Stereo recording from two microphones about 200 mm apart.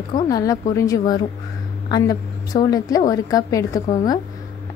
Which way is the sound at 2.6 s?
20° left (ahead or behind).